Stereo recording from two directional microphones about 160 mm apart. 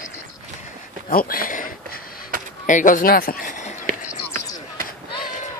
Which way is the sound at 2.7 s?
55° left (ahead or behind).